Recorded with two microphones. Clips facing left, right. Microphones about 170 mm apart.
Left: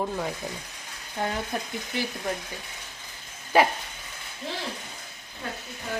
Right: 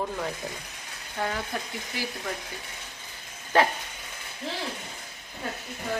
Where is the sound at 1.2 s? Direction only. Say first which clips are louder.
Left 1 dB; 20° left (ahead or behind).